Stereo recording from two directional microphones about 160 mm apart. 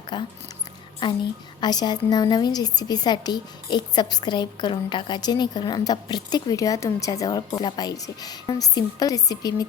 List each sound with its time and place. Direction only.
0.1 s a woman's voice: 25° left (ahead or behind)